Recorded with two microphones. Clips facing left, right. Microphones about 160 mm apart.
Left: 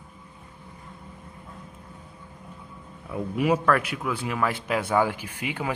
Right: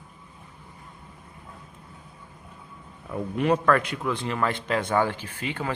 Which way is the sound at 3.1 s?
5° left (ahead or behind).